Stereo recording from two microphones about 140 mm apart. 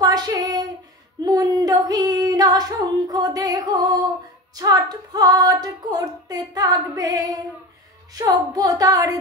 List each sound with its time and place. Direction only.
0.0 s child singing: 30° right (ahead or behind)
1.2 s female singing: 30° right (ahead or behind)